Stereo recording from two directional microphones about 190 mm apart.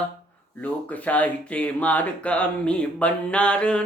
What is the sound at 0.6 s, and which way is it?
Speech, 10° left (ahead or behind).